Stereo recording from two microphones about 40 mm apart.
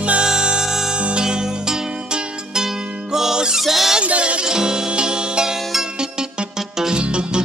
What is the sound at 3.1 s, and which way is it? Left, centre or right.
Music, centre.